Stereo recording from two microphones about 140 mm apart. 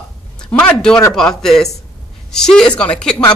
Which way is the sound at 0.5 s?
10° left (ahead or behind).